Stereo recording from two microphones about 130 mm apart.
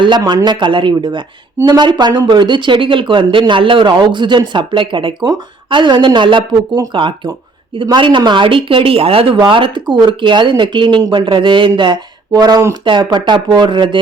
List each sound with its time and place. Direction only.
0.0 s speech: 35° right (ahead or behind)